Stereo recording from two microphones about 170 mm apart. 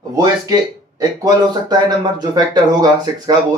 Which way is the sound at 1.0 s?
25° right (ahead or behind).